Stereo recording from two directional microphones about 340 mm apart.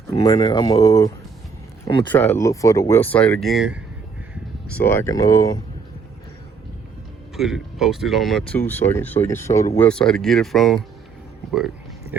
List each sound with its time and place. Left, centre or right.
0.1 s speech: centre
7.3 s speech: centre